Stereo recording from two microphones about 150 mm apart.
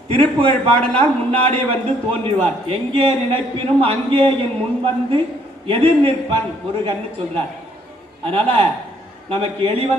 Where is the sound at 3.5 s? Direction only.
40° right (ahead or behind).